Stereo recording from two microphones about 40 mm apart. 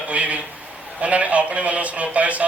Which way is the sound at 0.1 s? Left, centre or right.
Right.